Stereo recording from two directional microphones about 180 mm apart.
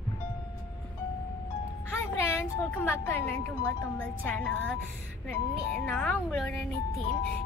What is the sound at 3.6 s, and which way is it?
Speech, 10° left (ahead or behind).